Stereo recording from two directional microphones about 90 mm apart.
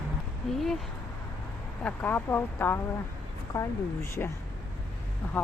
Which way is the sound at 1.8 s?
20° left (ahead or behind).